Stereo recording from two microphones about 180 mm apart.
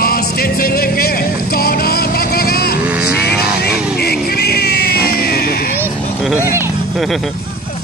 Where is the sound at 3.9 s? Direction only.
60° left (ahead or behind).